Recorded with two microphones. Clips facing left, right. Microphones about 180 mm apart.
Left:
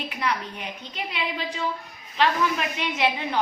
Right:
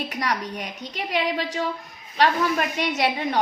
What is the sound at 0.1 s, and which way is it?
A woman's voice, 40° right (ahead or behind).